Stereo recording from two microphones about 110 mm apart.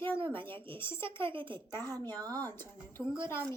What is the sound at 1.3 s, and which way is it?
Speech, 50° right (ahead or behind).